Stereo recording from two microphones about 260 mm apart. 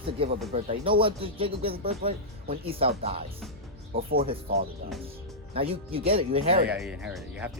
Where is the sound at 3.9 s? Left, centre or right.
Right.